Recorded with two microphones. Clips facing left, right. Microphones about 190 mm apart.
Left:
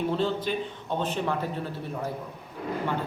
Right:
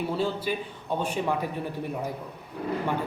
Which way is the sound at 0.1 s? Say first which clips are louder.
Left 1 dB; 10° right (ahead or behind).